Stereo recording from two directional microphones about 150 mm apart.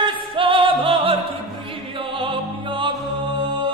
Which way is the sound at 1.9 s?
35° right (ahead or behind).